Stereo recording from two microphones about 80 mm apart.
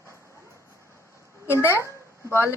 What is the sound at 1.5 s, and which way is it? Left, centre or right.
Speech, left.